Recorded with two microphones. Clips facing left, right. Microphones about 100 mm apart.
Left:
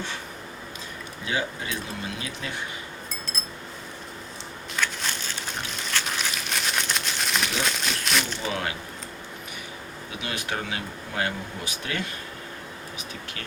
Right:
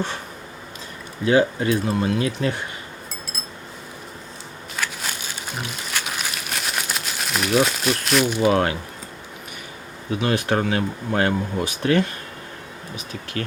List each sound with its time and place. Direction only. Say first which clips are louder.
1.2 s speech: right 12 dB; 45° right (ahead or behind)
4.8 s a sound: even; 5° right (ahead or behind)
8.4 s speech: right 11 dB; 45° right (ahead or behind)
10.2 s speech: right 10 dB; 45° right (ahead or behind)